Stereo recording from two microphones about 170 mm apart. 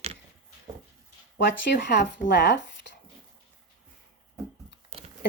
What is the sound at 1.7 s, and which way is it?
Speech, 90° left.